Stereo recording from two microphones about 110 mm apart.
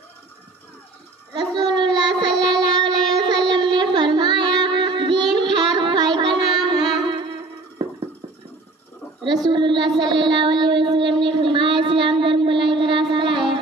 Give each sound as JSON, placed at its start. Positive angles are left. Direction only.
{"t": 1.3, "sound": "child singing", "side_deg": -45}
{"t": 9.2, "sound": "a sound", "side_deg": -40}
{"t": 13.1, "sound": "music", "side_deg": -50}